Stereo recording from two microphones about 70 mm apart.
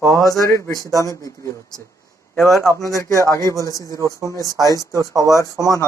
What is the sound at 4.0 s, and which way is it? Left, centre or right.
Speech, right.